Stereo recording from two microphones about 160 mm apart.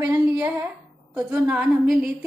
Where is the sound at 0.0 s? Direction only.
15° right (ahead or behind).